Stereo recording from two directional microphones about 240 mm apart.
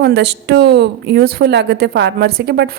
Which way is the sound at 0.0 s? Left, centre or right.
Right.